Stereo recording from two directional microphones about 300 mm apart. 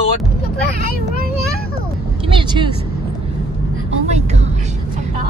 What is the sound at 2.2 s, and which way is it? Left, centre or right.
Vehicle, centre.